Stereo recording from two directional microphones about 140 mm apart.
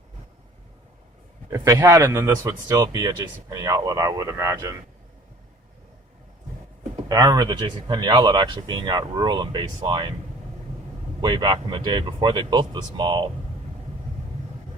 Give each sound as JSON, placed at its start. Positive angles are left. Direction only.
{"t": 1.5, "sound": "speech", "side_deg": -20}
{"t": 7.1, "sound": "speech", "side_deg": -30}
{"t": 11.2, "sound": "speech", "side_deg": -30}